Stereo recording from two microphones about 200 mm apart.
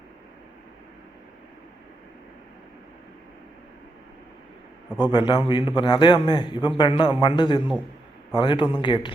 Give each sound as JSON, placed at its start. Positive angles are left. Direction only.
{"t": 5.1, "sound": "a man's voice", "side_deg": 25}